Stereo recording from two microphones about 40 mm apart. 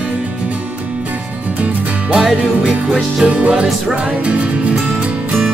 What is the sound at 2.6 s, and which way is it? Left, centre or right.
Music, right.